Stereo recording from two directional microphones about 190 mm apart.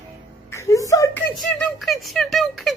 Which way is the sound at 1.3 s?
Centre (ahead or behind).